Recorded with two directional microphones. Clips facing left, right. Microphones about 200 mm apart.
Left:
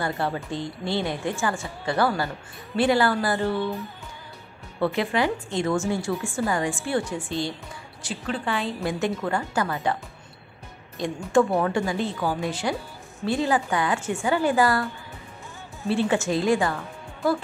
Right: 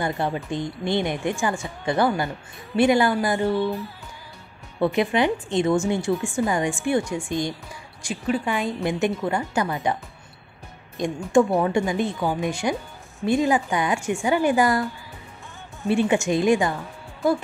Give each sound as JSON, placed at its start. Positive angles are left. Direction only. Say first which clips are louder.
{"t": 0.0, "sound": "a woman's voice", "louder": "right 2 dB", "side_deg": -20}
{"t": 4.7, "sound": "a woman's voice", "louder": "right 3 dB", "side_deg": -20}
{"t": 11.0, "sound": "a woman's voice", "louder": "right 2 dB", "side_deg": -20}
{"t": 15.9, "sound": "a woman's voice", "louder": "right 3 dB", "side_deg": -15}